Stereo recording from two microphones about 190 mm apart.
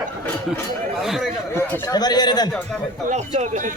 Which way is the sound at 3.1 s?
40° right (ahead or behind).